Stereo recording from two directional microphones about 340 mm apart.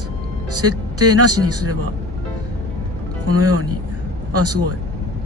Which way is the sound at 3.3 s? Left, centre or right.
Right.